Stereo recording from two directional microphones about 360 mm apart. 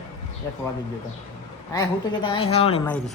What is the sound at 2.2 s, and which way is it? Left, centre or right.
Speech, centre.